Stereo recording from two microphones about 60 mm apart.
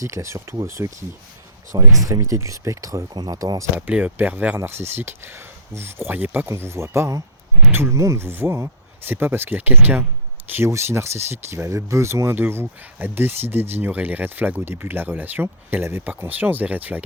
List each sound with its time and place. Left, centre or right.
0.0 s speech: right
2.0 s speech: right
3.8 s speech: right
4.6 s speech: right
6.6 s speech: right
7.9 s speech: right
8.3 s speech: right
10.7 s speech: right
12.3 s speech: right